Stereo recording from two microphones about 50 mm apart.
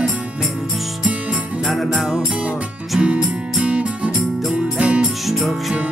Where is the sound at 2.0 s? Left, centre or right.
Centre.